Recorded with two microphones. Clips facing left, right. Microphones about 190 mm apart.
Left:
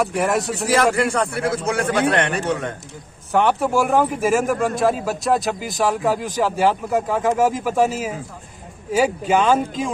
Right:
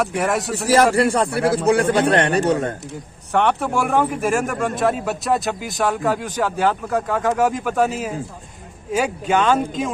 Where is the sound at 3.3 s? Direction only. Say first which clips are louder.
Left 1 dB; centre (ahead or behind).